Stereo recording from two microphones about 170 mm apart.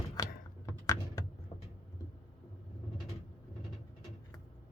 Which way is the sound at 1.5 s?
40° left (ahead or behind).